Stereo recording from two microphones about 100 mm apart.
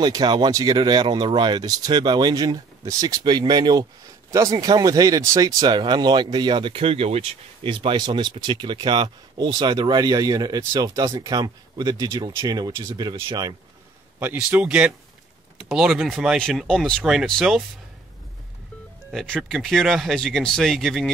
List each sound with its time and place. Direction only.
0.0 s speech: 45° right (ahead or behind)
4.3 s speech: 35° right (ahead or behind)
12.9 s speech: 45° right (ahead or behind)
14.2 s speech: 15° right (ahead or behind); by 17.0 s 5° left (ahead or behind)
17.0 s speech: 5° right (ahead or behind)
19.2 s speech: 5° left (ahead or behind)